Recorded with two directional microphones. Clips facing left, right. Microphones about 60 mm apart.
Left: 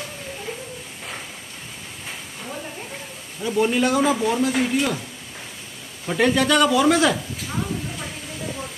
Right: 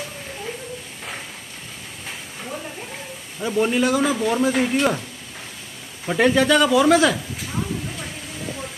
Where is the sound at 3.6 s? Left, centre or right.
Centre.